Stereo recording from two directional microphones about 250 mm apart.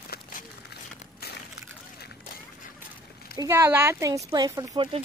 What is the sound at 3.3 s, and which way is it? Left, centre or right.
Speech, centre.